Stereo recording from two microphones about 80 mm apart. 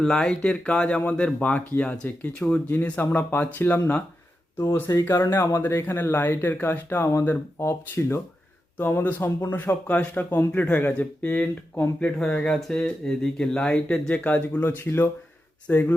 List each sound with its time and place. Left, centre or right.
0.0 s speech: centre; by 7.7 s left
7.7 s speech: left; by 14.7 s centre
14.8 s speech: left